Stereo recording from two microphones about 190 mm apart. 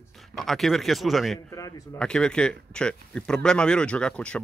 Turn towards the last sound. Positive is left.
turn(degrees=5)  # may be behind; listen again after turning